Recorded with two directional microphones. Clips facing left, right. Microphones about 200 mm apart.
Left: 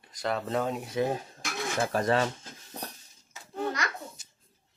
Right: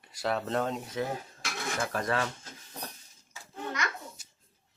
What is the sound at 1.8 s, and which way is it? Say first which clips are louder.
Dishes: left 5 dB; 30° left (ahead or behind).